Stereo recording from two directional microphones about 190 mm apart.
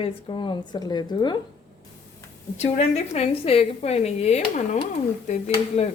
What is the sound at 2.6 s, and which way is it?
A woman's voice, 35° left (ahead or behind).